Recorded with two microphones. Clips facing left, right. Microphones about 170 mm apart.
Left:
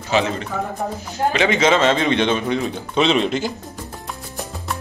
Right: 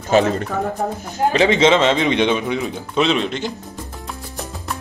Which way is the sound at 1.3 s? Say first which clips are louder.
Right 3 dB; 30° right (ahead or behind).